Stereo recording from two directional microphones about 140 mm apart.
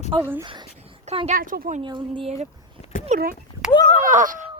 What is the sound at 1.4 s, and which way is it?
Speech, 85° right.